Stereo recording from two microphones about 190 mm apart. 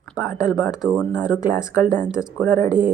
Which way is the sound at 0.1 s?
5° right (ahead or behind).